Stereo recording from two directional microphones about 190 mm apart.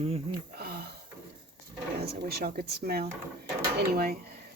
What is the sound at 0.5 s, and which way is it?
Speech, 55° right (ahead or behind).